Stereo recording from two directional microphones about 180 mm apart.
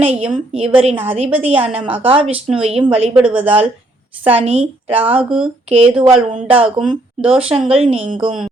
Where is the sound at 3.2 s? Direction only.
10° right (ahead or behind).